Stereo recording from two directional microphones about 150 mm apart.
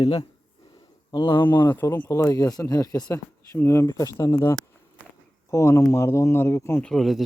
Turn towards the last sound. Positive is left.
turn(degrees=0)  # may be behind; listen again after turning